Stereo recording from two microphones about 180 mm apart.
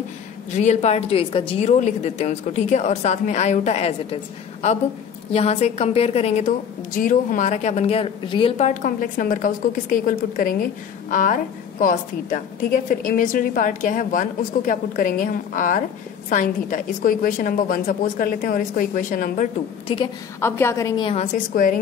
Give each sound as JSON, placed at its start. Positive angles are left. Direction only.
{"t": 0.5, "sound": "a woman's voice", "side_deg": 40}
{"t": 20.3, "sound": "a woman's voice", "side_deg": 15}
{"t": 21.2, "sound": "a woman's voice", "side_deg": 45}